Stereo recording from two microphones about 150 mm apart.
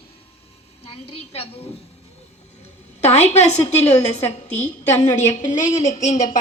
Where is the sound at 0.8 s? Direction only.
40° left (ahead or behind).